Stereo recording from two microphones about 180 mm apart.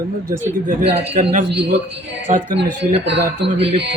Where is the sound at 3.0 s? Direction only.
70° right (ahead or behind).